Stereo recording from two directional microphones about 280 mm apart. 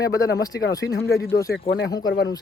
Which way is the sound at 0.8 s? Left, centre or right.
Left.